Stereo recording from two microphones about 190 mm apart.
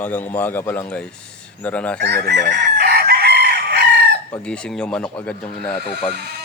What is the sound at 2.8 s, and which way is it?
Chicken, 55° right (ahead or behind).